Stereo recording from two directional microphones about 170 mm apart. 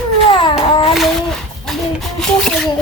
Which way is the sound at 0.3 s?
30° left (ahead or behind).